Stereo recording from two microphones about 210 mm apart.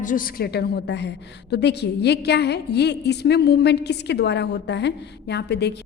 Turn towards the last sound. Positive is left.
turn(degrees=55)  # may be behind; listen again after turning